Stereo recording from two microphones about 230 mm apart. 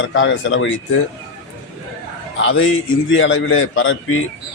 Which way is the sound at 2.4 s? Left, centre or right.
Left.